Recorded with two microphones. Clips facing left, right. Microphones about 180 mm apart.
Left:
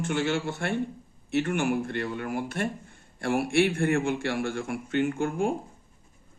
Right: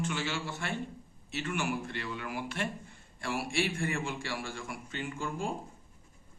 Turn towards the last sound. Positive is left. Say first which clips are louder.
# left 10 dB
turn(degrees=70)  # may be behind; listen again after turning